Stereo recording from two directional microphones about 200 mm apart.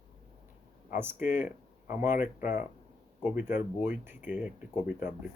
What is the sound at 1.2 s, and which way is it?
Speech, 40° left (ahead or behind).